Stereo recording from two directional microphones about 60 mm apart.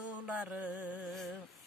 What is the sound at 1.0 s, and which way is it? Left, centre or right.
Speech, centre.